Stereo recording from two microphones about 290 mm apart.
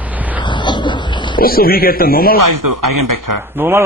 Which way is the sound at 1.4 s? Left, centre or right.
Left.